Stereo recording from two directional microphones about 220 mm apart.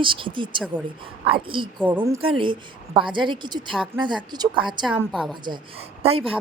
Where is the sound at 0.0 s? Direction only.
25° right (ahead or behind).